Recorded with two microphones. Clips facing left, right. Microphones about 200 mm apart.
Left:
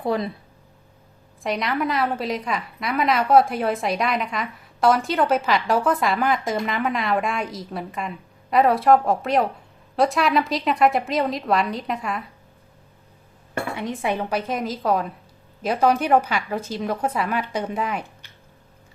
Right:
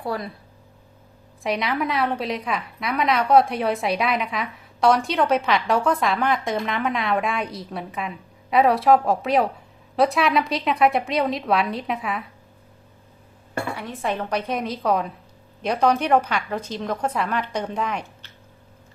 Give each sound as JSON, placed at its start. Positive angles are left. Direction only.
{"t": 0.0, "sound": "speech", "side_deg": 20}
{"t": 1.4, "sound": "a woman's voice", "side_deg": 0}
{"t": 13.7, "sound": "a woman's voice", "side_deg": 15}